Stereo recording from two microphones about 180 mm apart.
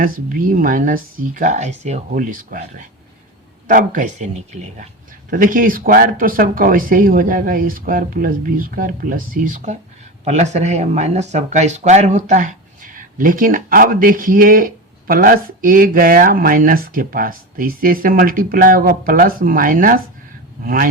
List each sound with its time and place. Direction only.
0.0 s speech: 50° right (ahead or behind)